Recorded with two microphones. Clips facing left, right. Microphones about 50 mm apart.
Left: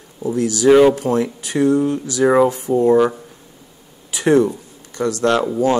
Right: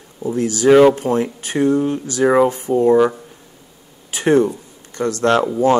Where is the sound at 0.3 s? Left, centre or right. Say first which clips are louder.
Even; right.